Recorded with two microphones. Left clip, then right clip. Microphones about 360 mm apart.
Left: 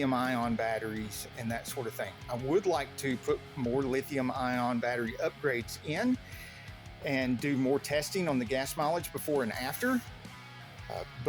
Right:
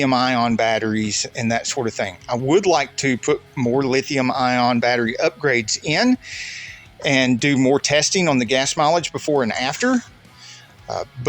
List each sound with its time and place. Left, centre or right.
0.0 s speech: left